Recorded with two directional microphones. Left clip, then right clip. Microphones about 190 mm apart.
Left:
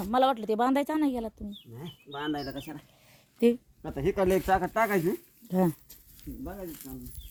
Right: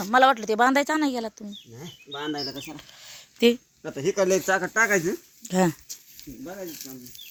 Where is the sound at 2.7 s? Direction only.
Centre (ahead or behind).